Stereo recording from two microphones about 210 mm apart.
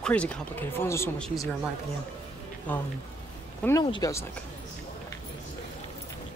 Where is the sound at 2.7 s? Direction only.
10° left (ahead or behind).